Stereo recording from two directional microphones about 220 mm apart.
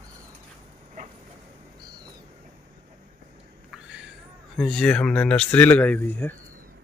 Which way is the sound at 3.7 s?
5° right (ahead or behind).